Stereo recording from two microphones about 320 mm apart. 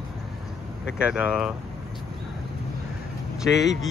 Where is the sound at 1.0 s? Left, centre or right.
Centre.